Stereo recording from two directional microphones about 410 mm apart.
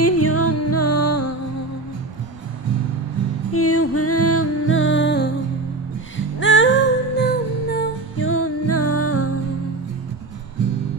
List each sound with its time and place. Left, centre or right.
0.0 s music: left
3.5 s music: left